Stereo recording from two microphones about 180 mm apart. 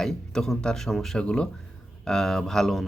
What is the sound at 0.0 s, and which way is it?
Speech, 5° left (ahead or behind).